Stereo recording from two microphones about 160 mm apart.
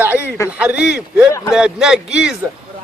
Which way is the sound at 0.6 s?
5° right (ahead or behind).